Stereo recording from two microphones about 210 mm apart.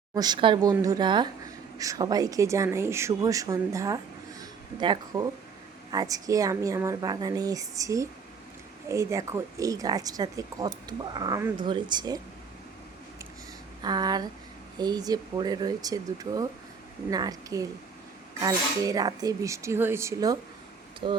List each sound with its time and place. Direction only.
0.1 s a woman's voice: 20° right (ahead or behind)
13.8 s a woman's voice: 20° right (ahead or behind)